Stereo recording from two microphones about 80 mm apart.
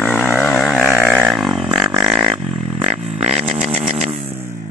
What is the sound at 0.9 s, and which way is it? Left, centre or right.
Livestock, right.